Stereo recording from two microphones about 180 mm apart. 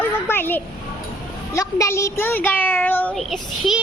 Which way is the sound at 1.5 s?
15° left (ahead or behind).